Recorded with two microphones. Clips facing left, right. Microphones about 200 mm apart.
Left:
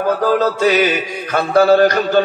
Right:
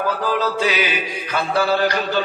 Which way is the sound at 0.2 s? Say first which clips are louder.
Left 6 dB; 45° left (ahead or behind).